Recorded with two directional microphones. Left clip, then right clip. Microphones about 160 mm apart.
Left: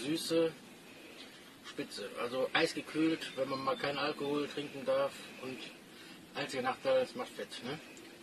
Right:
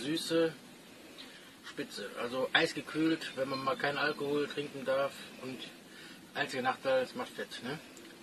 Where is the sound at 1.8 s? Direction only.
Centre (ahead or behind).